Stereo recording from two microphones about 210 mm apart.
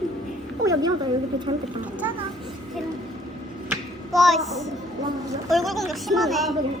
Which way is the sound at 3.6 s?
Centre (ahead or behind).